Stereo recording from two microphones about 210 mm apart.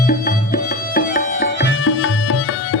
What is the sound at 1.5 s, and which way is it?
Tabla, 70° left (ahead or behind).